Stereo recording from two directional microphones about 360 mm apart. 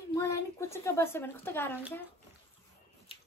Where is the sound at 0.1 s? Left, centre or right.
Centre.